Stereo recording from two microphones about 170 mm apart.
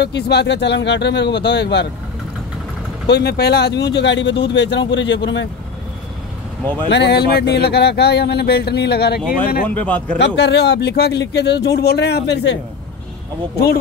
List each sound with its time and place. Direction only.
0.0 s speech: 80° left
3.1 s speech: 75° left (ahead or behind); by 5.5 s 90° left
6.9 s speech: 80° left
9.8 s speech: 10° left (ahead or behind)
10.1 s speech: 90° left